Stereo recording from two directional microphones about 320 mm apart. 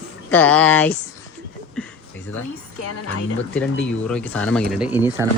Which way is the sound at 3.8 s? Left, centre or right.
Centre.